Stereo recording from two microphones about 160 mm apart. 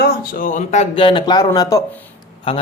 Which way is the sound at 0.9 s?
30° left (ahead or behind).